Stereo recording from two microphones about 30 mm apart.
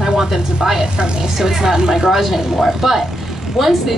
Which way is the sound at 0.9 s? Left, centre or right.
Right.